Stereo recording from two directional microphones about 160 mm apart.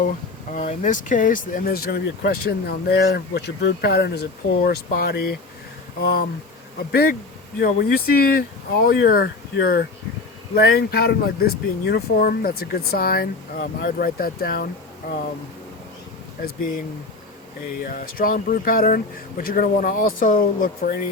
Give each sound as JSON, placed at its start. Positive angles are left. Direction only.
{"t": 0.5, "sound": "speech", "side_deg": 50}
{"t": 17.7, "sound": "speech", "side_deg": 65}